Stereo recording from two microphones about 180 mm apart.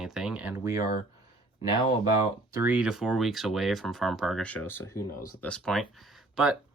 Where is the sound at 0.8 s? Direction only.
55° left (ahead or behind).